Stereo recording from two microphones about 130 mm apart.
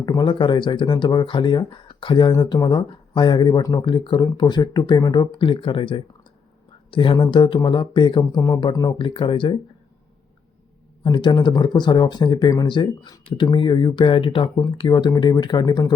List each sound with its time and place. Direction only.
0.0 s speech: 35° left (ahead or behind)
11.0 s speech: 40° left (ahead or behind)